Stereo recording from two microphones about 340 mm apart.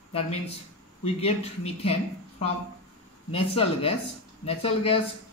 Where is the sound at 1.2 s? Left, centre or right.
Centre.